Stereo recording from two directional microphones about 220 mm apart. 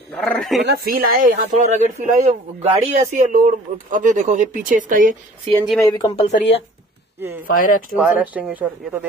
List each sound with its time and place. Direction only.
0.1 s speech: centre (ahead or behind)
0.6 s speech: 45° right (ahead or behind)
5.9 s speech: 20° left (ahead or behind)
7.4 s speech: 40° left (ahead or behind)
7.9 s speech: 5° right (ahead or behind)